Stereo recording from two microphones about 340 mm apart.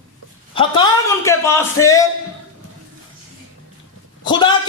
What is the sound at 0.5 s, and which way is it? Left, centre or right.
A man's voice, centre.